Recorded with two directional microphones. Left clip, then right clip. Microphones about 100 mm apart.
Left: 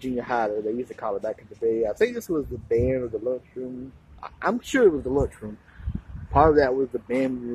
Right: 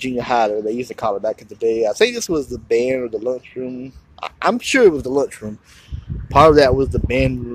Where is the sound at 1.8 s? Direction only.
45° right (ahead or behind).